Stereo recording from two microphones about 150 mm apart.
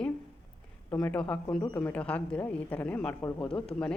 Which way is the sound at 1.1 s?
5° left (ahead or behind).